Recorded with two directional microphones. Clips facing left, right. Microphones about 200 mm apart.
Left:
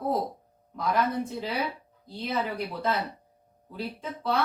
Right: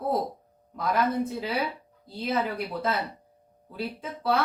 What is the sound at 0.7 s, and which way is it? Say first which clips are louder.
Speech: right 1 dB; 5° right (ahead or behind).